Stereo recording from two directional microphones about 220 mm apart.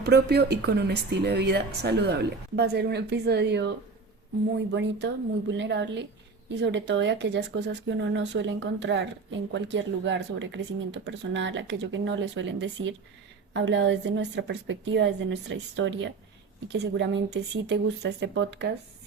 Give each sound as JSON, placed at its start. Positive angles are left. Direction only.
{"t": 0.0, "sound": "a woman's voice", "side_deg": -50}